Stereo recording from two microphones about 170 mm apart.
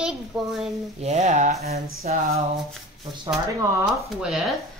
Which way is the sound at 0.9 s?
40° right (ahead or behind).